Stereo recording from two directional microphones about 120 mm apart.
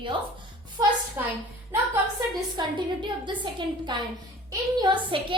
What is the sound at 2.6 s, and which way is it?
A woman's voice, 40° right (ahead or behind).